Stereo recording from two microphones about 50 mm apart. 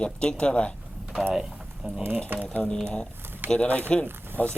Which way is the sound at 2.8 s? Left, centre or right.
Centre.